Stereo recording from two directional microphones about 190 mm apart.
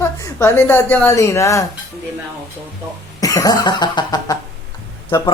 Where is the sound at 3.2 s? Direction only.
20° left (ahead or behind).